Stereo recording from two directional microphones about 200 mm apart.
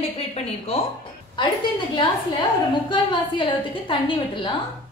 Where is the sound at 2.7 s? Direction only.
25° left (ahead or behind).